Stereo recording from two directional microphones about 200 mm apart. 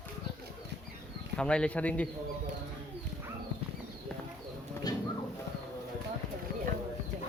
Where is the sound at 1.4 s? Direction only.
5° left (ahead or behind).